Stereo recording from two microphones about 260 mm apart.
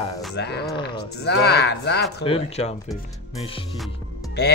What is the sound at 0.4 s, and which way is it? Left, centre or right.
Speech, left.